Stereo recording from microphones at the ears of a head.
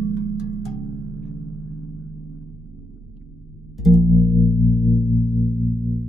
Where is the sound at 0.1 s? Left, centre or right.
Right.